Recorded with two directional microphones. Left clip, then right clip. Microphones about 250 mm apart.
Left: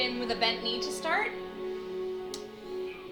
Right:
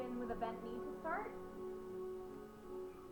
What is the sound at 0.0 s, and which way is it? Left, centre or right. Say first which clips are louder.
A woman's voice: left 14 dB; left.